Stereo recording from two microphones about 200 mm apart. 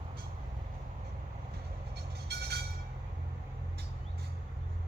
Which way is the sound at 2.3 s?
50° right (ahead or behind).